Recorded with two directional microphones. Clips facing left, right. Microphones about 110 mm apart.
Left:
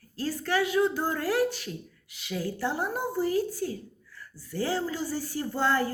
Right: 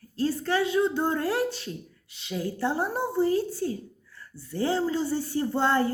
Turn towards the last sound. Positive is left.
turn(degrees=-25)  # may be behind; listen again after turning